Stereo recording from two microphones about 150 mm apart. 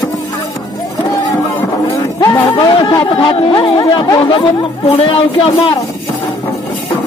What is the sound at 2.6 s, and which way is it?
A man's voice, 30° left (ahead or behind).